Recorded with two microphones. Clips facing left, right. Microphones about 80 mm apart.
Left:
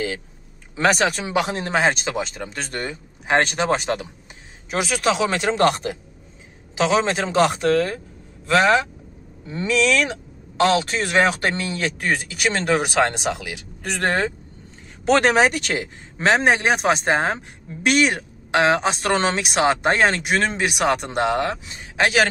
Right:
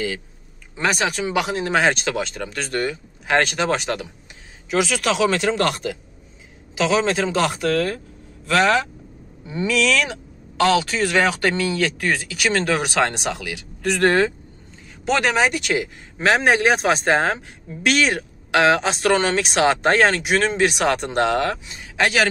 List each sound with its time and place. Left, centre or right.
0.8 s speech: left
1.7 s speech: left
15.0 s speech: left; by 21.5 s centre
21.6 s speech: left